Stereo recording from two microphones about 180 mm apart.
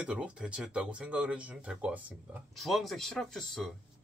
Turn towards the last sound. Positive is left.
turn(degrees=0)  # may be behind; listen again after turning